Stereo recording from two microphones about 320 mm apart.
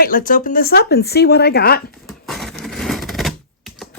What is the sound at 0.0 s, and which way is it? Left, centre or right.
Speech, left.